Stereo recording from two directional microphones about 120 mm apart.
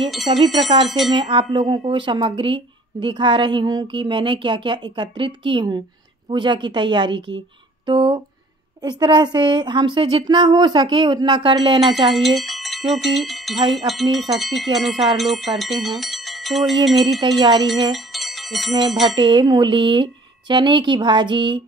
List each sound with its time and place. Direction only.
0.1 s speech: centre (ahead or behind)
1.1 s a woman's voice: 40° right (ahead or behind)
12.1 s speech: centre (ahead or behind)
17.2 s a woman's voice: 40° right (ahead or behind)
17.9 s music: centre (ahead or behind)
19.0 s a woman's voice: 40° right (ahead or behind)